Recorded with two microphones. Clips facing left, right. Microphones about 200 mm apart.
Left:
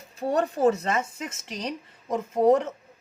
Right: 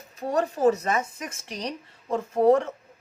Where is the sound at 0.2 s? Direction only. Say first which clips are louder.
Left 1 dB; 30° left (ahead or behind).